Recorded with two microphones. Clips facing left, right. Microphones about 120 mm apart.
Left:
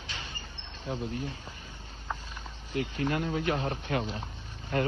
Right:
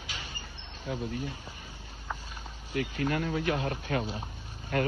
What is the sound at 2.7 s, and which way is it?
A man's voice, 35° left (ahead or behind).